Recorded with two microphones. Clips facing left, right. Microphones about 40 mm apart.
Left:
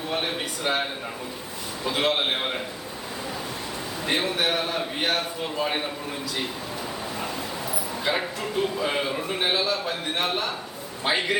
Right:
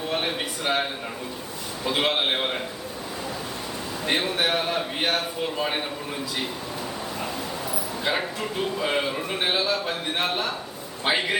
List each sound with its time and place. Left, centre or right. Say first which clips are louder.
0.1 s a man's voice: even; centre
1.9 s a man's voice: right 1 dB; centre
4.0 s a man's voice: right 1 dB; centre
7.7 s a man's voice: even; centre